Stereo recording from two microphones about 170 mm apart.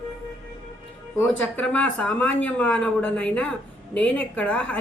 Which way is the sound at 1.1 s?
10° left (ahead or behind).